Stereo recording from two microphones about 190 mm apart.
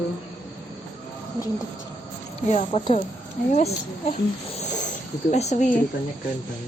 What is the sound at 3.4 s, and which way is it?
Speech, 50° left (ahead or behind).